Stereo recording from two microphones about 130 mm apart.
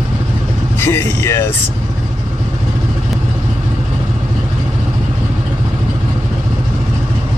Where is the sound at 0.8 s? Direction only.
20° left (ahead or behind).